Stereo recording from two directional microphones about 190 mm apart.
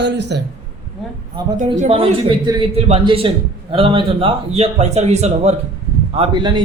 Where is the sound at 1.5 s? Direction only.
40° right (ahead or behind).